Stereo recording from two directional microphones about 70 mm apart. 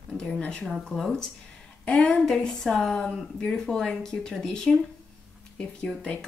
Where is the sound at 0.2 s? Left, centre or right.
Centre.